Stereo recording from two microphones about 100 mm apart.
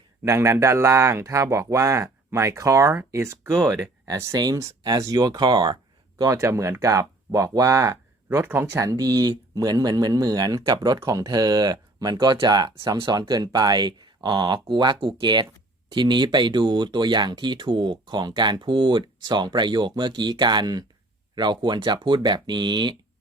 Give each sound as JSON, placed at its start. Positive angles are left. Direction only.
{"t": 0.3, "sound": "speech", "side_deg": -25}
{"t": 3.7, "sound": "speech", "side_deg": -40}
{"t": 6.1, "sound": "speech", "side_deg": -30}
{"t": 8.8, "sound": "speech", "side_deg": -35}